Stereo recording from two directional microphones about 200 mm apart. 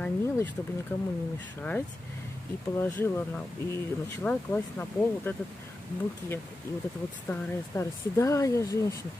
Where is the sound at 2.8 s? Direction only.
10° left (ahead or behind).